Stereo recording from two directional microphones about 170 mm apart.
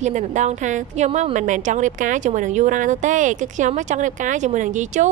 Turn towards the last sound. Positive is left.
turn(degrees=-45)  # may be behind; listen again after turning